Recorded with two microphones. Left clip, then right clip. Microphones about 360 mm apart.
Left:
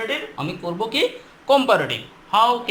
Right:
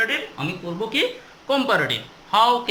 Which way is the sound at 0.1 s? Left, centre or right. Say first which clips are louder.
Even; centre.